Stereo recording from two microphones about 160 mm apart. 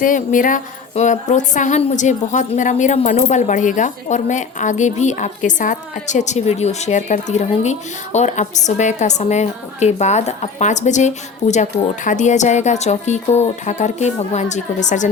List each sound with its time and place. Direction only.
0.0 s speech: 55° left (ahead or behind)